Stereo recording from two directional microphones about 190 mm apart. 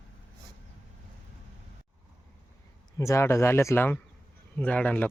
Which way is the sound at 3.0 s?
15° left (ahead or behind).